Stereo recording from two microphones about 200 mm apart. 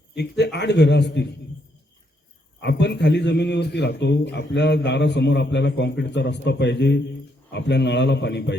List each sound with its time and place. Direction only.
0.1 s a man's voice: 55° left (ahead or behind)
2.6 s a man's voice: 60° left (ahead or behind)